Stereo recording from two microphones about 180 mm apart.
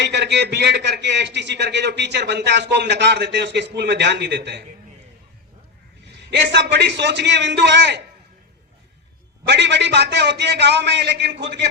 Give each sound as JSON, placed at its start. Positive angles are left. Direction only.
{"t": 0.0, "sound": "a man's voice", "side_deg": -70}
{"t": 6.1, "sound": "a man's voice", "side_deg": -75}
{"t": 9.5, "sound": "a man's voice", "side_deg": -75}